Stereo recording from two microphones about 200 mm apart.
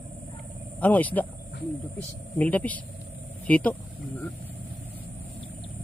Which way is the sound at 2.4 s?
5° left (ahead or behind).